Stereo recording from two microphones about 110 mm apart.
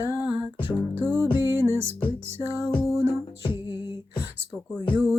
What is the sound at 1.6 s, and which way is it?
Music, 25° right (ahead or behind).